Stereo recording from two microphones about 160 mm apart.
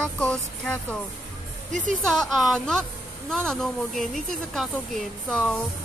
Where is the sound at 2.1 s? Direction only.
Centre (ahead or behind).